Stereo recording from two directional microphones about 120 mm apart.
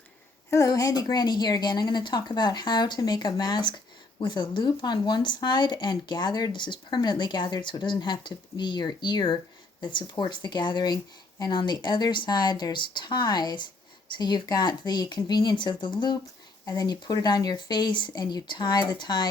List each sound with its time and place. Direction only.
0.5 s speech: 30° left (ahead or behind)